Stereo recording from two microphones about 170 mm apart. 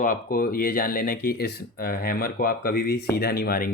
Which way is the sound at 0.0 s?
55° left (ahead or behind).